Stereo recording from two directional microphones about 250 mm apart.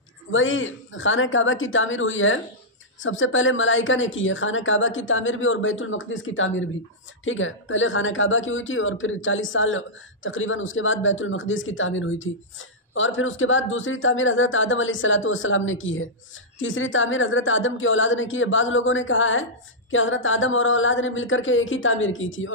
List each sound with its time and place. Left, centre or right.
0.3 s speech: left